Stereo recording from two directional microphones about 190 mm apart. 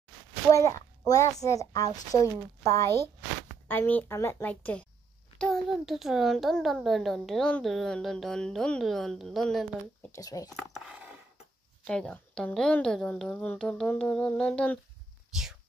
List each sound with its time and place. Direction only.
0.5 s a child's voice: 15° left (ahead or behind)
10.1 s speech: 20° left (ahead or behind)
10.6 s a child's voice: centre (ahead or behind)